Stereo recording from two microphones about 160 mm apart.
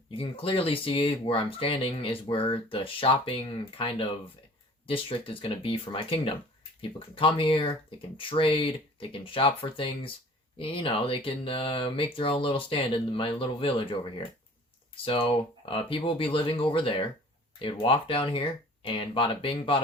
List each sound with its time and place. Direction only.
0.2 s speech: 35° left (ahead or behind)